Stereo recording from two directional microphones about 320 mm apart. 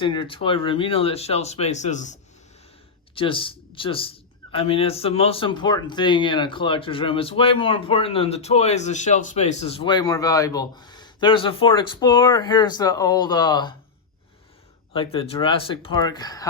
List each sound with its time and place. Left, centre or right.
0.0 s speech: centre
3.2 s speech: centre
14.9 s speech: centre